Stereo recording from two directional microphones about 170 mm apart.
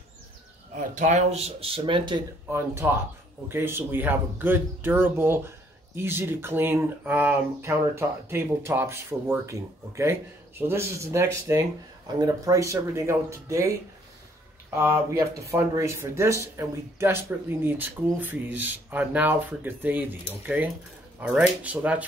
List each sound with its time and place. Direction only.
0.7 s speech: 45° right (ahead or behind); by 2.2 s 30° right (ahead or behind)
2.5 s speech: 15° right (ahead or behind)
14.8 s speech: 15° right (ahead or behind)